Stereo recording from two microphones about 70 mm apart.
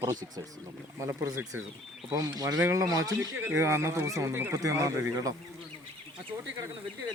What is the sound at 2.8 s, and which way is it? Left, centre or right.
Speech, right.